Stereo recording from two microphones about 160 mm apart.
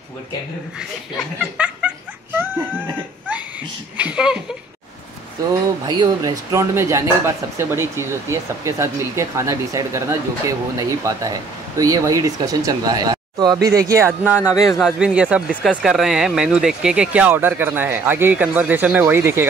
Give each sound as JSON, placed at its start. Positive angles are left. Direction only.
{"t": 0.7, "sound": "snicker", "side_deg": -5}
{"t": 3.9, "sound": "speech", "side_deg": -5}
{"t": 5.4, "sound": "speech", "side_deg": -25}